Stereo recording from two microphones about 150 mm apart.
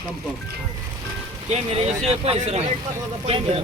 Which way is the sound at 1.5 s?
45° right (ahead or behind).